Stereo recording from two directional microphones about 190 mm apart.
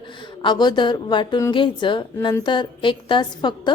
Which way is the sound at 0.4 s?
20° left (ahead or behind).